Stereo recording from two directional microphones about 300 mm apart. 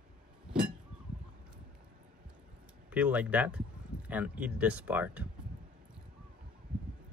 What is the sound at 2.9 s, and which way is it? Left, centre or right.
Speech, centre.